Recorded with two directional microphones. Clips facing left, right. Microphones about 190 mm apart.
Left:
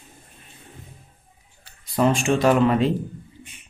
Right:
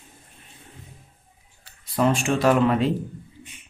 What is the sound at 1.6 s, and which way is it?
Speech, centre (ahead or behind).